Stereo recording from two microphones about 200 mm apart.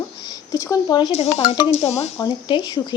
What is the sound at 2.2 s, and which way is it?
Speech, 20° left (ahead or behind).